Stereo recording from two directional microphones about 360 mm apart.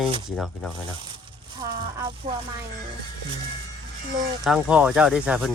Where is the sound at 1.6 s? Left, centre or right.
Centre.